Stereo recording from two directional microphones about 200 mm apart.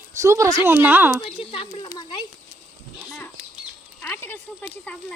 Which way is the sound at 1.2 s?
25° left (ahead or behind).